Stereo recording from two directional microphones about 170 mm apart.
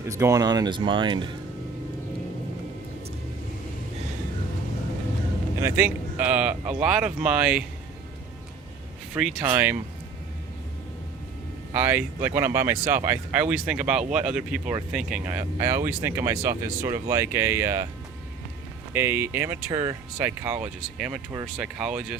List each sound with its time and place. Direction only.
0.1 s speech: 20° right (ahead or behind)
5.5 s speech: 15° right (ahead or behind)
9.1 s speech: 5° right (ahead or behind)
11.7 s speech: 10° right (ahead or behind)
18.9 s speech: 15° right (ahead or behind)
20.2 s speech: 10° right (ahead or behind)